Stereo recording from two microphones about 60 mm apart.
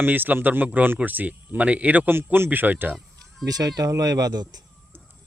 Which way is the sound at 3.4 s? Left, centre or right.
Right.